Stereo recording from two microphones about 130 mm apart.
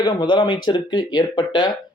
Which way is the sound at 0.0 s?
35° left (ahead or behind).